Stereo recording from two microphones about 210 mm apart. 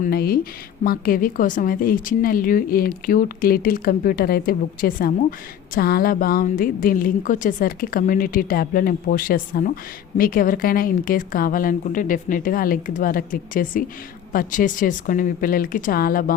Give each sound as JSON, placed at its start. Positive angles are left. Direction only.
{"t": 0.0, "sound": "speech", "side_deg": 45}